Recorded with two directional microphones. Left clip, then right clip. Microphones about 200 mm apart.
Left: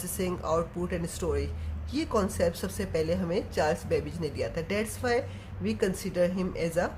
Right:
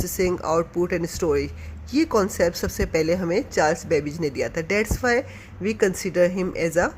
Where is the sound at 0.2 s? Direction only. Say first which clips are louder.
Right 7 dB; 35° right (ahead or behind).